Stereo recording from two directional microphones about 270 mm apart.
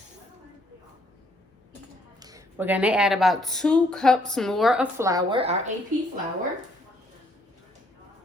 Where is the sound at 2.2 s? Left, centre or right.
Centre.